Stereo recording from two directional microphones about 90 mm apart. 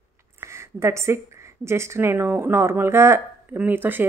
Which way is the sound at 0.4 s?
30° right (ahead or behind).